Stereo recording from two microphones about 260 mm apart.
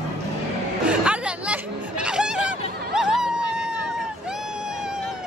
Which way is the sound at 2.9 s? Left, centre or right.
Centre.